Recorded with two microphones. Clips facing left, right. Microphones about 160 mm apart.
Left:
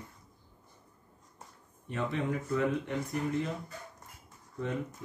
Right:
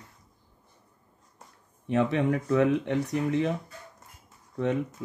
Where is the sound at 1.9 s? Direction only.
75° right (ahead or behind).